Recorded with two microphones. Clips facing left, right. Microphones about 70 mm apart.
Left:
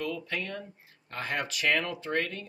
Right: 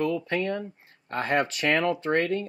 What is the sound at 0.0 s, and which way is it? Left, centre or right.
Speech, right.